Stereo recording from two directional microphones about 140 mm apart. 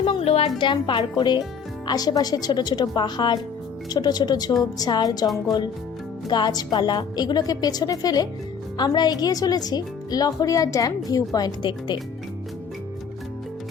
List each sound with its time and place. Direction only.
0.0 s music: 45° left (ahead or behind)
0.6 s a woman's voice: 35° left (ahead or behind)